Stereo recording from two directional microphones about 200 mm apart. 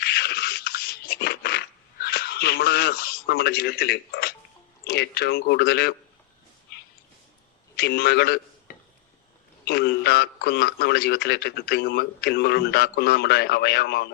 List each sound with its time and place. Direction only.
0.0 s a sound: 55° left (ahead or behind)
4.9 s a man's voice: 55° left (ahead or behind)
7.8 s a man's voice: 55° left (ahead or behind)